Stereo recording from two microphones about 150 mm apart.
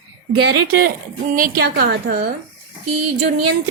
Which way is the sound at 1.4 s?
80° right.